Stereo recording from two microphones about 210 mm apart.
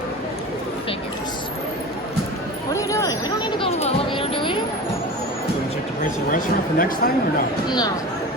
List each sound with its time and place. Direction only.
2.7 s a sound: 15° left (ahead or behind)
6.0 s speech: 40° left (ahead or behind)
7.7 s speech: 20° left (ahead or behind)